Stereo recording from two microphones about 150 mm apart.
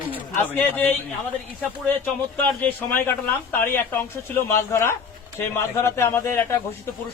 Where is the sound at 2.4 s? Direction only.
15° left (ahead or behind).